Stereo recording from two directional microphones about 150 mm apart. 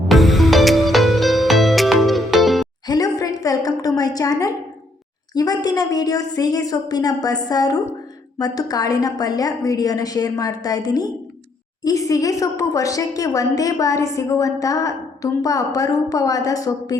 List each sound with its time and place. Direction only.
0.1 s music: centre (ahead or behind)
2.8 s a sound: 25° left (ahead or behind)
5.3 s a woman's voice: 25° left (ahead or behind)